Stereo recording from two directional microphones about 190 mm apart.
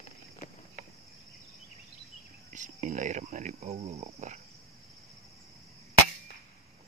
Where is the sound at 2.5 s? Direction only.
40° right (ahead or behind).